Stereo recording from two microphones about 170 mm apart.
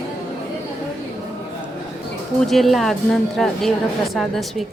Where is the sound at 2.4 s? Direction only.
Centre (ahead or behind).